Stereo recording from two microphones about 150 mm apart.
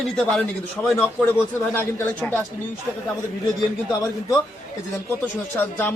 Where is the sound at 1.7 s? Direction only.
10° left (ahead or behind).